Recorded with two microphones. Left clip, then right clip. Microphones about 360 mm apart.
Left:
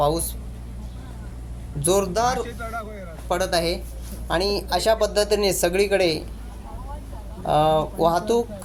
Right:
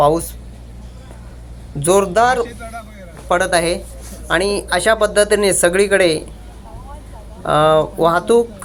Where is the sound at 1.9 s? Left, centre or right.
Left.